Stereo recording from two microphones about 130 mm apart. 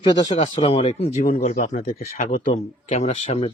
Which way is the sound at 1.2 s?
90° left.